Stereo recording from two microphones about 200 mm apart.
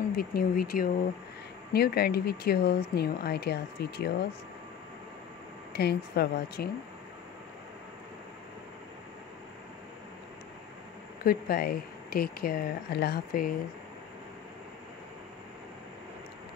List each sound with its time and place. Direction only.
0.1 s speech: 50° left (ahead or behind)
5.7 s speech: 55° left (ahead or behind)
11.2 s speech: 50° left (ahead or behind)